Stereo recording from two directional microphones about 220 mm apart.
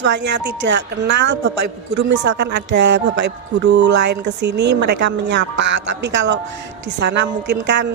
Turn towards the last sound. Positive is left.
turn(degrees=-55)  # may be behind; listen again after turning